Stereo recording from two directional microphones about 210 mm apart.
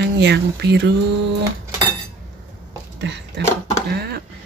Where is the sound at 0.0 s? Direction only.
55° right (ahead or behind).